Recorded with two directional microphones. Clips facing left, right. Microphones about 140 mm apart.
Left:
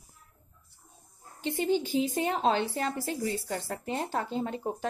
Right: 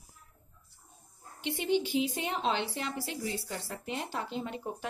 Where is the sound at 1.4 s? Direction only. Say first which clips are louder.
Left 2 dB; 45° left (ahead or behind).